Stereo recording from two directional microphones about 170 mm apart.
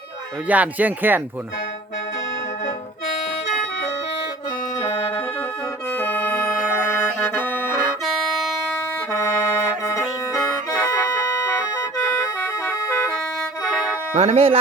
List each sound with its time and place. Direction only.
0.4 s speech: 10° right (ahead or behind)
4.8 s music: 25° left (ahead or behind)
5.9 s organ: 10° left (ahead or behind)
6.9 s music: 10° left (ahead or behind)
8.0 s music: centre (ahead or behind)
9.1 s music: 15° left (ahead or behind)
13.7 s music: 5° left (ahead or behind)
14.1 s speech: 40° right (ahead or behind)